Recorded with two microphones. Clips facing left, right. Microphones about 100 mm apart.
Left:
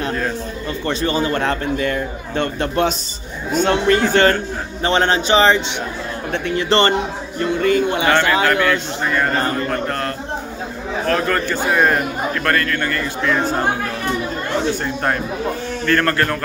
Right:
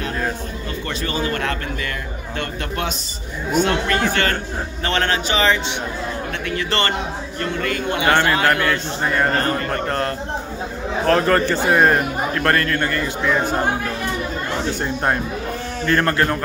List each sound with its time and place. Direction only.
0.8 s a man's voice: 30° left (ahead or behind)
8.1 s a man's voice: 35° right (ahead or behind)
9.8 s a man's voice: 30° right (ahead or behind)
15.8 s a man's voice: 20° right (ahead or behind)